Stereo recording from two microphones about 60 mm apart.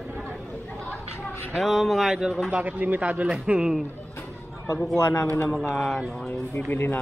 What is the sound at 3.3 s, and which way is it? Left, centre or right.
Speech, centre.